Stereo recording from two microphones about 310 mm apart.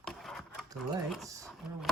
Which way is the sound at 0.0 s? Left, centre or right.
Centre.